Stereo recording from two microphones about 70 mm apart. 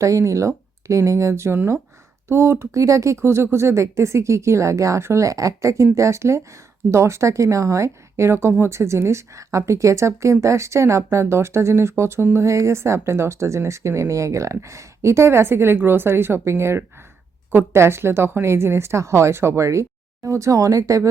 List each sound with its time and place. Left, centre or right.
0.0 s speech: right